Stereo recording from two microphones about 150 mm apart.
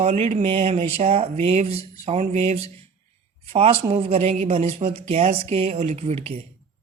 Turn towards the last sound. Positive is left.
turn(degrees=-45)  # may be behind; listen again after turning